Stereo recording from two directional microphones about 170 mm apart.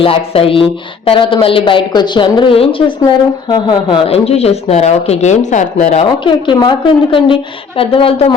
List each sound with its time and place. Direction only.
0.0 s speech: 35° left (ahead or behind)